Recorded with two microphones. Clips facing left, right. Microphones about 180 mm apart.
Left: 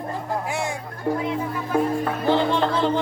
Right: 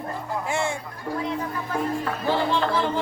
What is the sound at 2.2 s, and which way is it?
Music, 20° left (ahead or behind).